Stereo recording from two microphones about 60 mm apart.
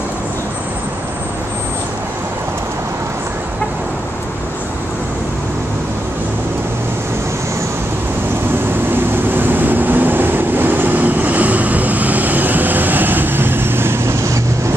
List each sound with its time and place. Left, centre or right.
8.9 s vehicle: right